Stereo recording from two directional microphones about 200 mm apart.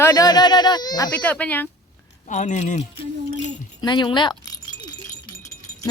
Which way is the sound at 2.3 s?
35° left (ahead or behind).